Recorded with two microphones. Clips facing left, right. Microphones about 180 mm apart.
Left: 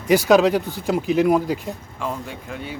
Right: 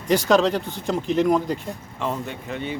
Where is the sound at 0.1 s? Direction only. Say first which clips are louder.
Left 3 dB; 10° left (ahead or behind).